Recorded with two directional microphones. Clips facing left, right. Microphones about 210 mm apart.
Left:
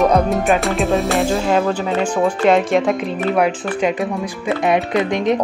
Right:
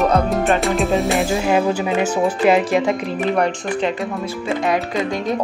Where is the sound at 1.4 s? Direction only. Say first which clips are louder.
Even; 10° right (ahead or behind).